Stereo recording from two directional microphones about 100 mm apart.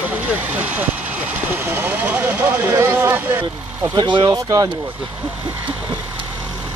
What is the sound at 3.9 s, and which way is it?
Speech, 50° right (ahead or behind).